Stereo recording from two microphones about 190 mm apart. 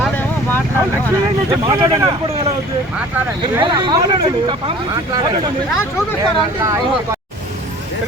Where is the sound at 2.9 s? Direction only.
10° right (ahead or behind).